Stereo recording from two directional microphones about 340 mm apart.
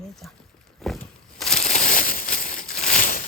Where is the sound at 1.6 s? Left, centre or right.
Left.